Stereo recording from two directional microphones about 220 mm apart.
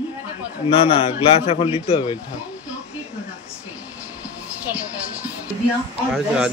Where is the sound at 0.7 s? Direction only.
25° left (ahead or behind).